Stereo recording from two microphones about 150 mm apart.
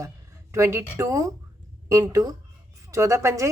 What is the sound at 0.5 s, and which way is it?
A woman's voice, 20° right (ahead or behind).